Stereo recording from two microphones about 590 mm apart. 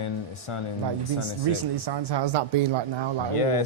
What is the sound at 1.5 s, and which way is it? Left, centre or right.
Speech, right.